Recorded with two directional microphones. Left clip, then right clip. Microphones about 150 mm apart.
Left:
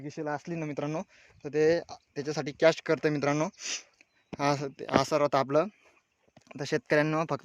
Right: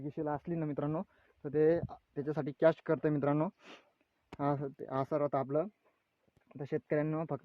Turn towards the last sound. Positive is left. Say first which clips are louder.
# left 8 dB
turn(degrees=45)  # may be behind; listen again after turning